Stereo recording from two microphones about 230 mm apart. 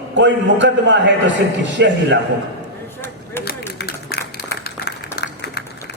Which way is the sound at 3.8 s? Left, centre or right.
Left.